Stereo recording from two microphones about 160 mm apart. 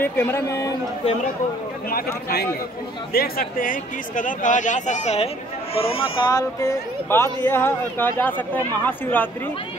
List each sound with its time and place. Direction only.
0.0 s speech: 15° left (ahead or behind)
1.9 s speech: 70° left (ahead or behind); by 9.3 s 10° left (ahead or behind)